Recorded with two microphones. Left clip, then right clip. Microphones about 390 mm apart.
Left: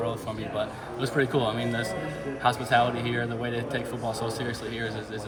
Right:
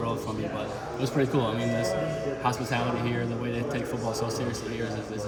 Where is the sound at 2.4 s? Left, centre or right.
Centre.